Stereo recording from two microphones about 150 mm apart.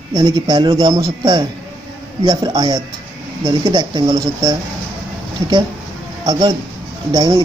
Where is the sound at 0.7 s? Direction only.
20° right (ahead or behind).